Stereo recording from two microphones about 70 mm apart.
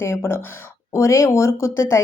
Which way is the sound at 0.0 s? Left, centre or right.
Left.